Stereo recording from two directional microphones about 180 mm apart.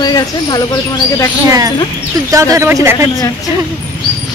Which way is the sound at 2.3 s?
15° right (ahead or behind).